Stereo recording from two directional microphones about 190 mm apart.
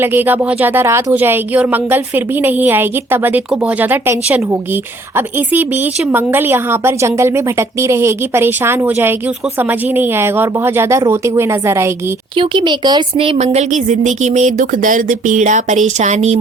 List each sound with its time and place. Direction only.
0.0 s speech: 10° right (ahead or behind)
6.1 s speech: 10° right (ahead or behind)
12.4 s speech: 25° right (ahead or behind)